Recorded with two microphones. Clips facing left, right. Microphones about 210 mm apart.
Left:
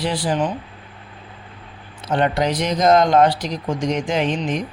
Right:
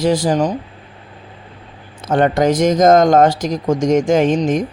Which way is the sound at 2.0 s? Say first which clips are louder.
Right 5 dB; 45° right (ahead or behind).